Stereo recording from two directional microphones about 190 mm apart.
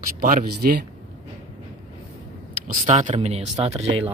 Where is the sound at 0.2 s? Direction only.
45° right (ahead or behind).